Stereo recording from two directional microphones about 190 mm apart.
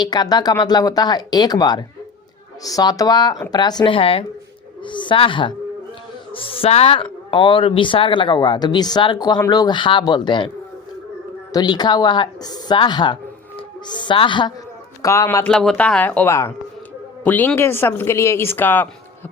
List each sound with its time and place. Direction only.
0.0 s speech: 20° left (ahead or behind)
11.5 s speech: 20° left (ahead or behind)
15.4 s speech: 5° left (ahead or behind)